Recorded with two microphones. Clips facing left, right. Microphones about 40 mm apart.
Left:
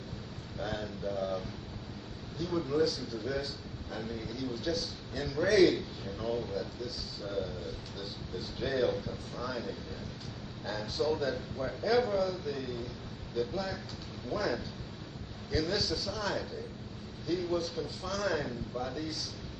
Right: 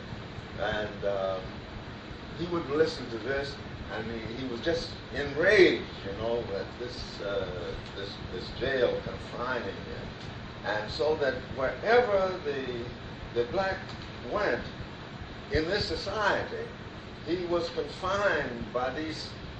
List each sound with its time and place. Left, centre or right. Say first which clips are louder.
0.6 s a man's voice: right 6 dB; right
17.3 s a man's voice: right 3 dB; right